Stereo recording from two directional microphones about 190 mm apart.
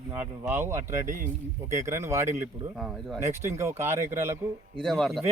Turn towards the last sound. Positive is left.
turn(degrees=0)  # may be behind; listen again after turning